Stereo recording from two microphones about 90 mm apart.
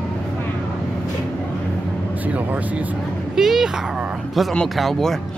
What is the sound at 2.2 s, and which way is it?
Speech, 15° right (ahead or behind).